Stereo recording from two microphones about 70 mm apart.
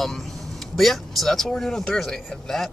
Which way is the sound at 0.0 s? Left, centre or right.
Centre.